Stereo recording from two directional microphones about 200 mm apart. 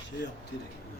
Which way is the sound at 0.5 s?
60° left (ahead or behind).